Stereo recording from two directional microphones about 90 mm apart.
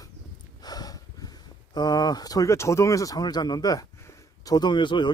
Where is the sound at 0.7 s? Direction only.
45° left (ahead or behind).